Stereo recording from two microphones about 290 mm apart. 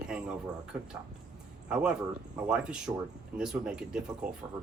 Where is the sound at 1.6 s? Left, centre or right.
Centre.